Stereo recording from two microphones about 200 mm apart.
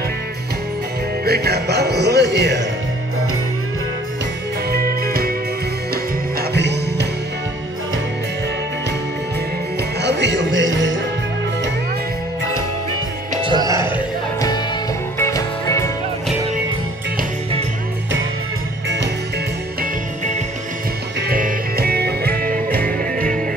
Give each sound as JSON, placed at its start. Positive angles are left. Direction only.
{"t": 1.2, "sound": "speech", "side_deg": -50}
{"t": 4.6, "sound": "music", "side_deg": -50}
{"t": 6.5, "sound": "music", "side_deg": -60}
{"t": 10.0, "sound": "music", "side_deg": -60}
{"t": 13.4, "sound": "music", "side_deg": -20}
{"t": 15.1, "sound": "music", "side_deg": 15}
{"t": 21.2, "sound": "music", "side_deg": -45}